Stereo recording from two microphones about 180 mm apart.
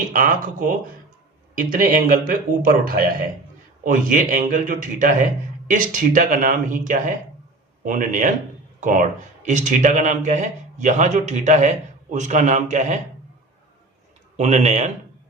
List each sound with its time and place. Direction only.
0.1 s a man's voice: 50° right (ahead or behind)
14.3 s a man's voice: 40° right (ahead or behind)